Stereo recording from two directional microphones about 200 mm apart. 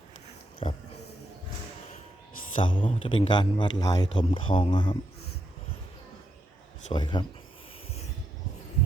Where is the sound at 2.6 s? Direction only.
25° left (ahead or behind).